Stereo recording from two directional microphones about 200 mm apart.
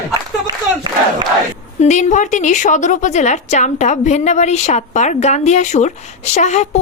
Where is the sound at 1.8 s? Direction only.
35° left (ahead or behind).